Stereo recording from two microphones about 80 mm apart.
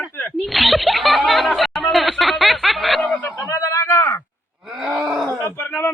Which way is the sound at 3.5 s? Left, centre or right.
Left.